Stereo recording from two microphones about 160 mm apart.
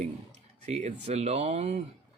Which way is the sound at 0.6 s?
45° right (ahead or behind).